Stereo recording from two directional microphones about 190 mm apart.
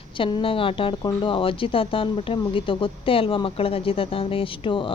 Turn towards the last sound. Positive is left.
turn(degrees=25)  # may be behind; listen again after turning